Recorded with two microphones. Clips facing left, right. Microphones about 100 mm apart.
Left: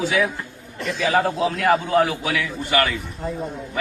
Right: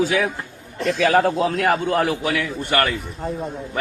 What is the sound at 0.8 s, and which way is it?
A man's voice, 60° right (ahead or behind).